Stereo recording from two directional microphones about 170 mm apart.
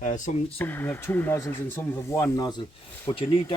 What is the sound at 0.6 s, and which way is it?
Speech, 10° left (ahead or behind).